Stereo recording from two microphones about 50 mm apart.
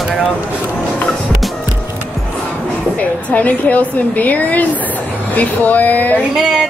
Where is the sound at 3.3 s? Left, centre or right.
Left.